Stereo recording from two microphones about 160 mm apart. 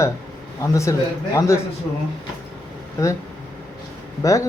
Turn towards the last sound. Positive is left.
turn(degrees=20)  # may be behind; listen again after turning